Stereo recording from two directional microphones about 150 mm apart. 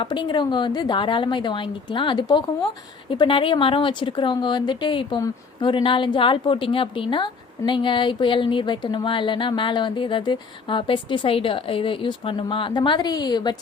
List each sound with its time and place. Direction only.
0.0 s a woman's voice: 30° left (ahead or behind)